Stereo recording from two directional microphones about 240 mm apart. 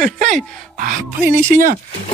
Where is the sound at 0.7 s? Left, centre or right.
Right.